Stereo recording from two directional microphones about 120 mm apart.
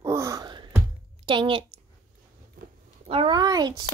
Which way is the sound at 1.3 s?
45° right (ahead or behind).